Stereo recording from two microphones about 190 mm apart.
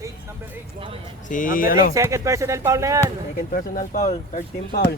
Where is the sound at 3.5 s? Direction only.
45° left (ahead or behind).